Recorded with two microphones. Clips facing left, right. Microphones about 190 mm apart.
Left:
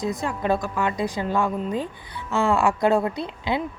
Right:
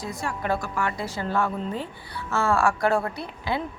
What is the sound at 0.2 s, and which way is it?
A woman's voice, 20° left (ahead or behind).